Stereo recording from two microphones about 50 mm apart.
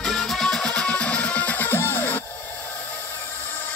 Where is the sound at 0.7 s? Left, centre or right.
Left.